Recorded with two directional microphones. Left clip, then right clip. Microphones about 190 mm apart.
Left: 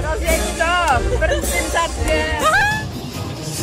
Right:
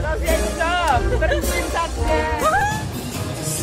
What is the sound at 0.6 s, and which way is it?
Music, 40° left (ahead or behind).